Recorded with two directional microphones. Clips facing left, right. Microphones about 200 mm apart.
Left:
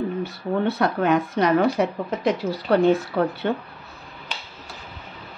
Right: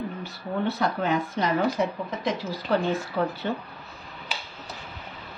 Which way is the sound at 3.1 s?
50° left (ahead or behind).